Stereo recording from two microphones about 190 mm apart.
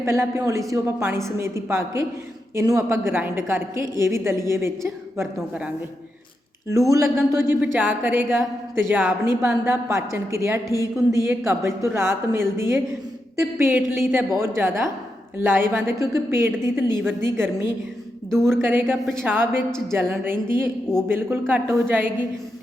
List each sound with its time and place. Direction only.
0.0 s speech: 15° right (ahead or behind)
6.9 s speech: 15° right (ahead or behind)
18.3 s speech: centre (ahead or behind)
18.5 s speech: 10° right (ahead or behind)